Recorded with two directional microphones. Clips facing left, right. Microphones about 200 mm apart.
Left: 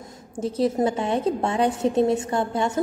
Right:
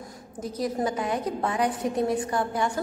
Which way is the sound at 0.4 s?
30° left (ahead or behind).